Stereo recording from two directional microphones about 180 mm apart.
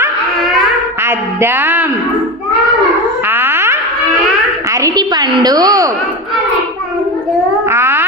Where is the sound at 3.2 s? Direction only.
10° right (ahead or behind).